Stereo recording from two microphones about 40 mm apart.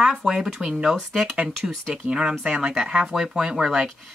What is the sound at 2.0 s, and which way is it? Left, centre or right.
Speech, right.